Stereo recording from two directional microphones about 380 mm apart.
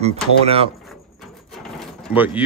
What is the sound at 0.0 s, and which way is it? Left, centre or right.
Speech, centre.